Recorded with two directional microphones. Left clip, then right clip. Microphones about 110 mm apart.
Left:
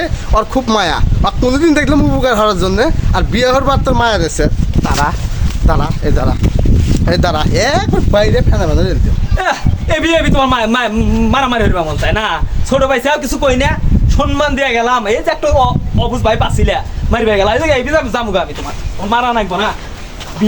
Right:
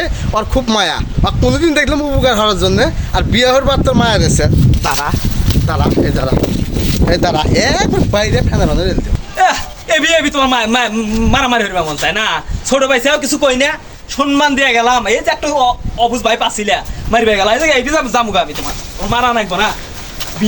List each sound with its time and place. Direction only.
0.0 s a man's voice: 40° left (ahead or behind)
5.6 s a man's voice: 25° left (ahead or behind)
7.2 s speech: 60° left (ahead or behind)
7.5 s a man's voice: 30° left (ahead or behind)
7.8 s a man's voice: 15° left (ahead or behind); by 13.7 s 50° left (ahead or behind)
14.2 s a man's voice: 40° left (ahead or behind); by 19.6 s 20° left (ahead or behind)